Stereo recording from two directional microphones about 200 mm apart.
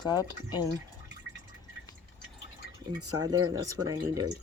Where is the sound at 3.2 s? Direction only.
20° right (ahead or behind).